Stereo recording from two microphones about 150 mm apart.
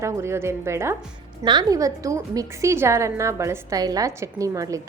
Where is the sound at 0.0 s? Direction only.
20° right (ahead or behind).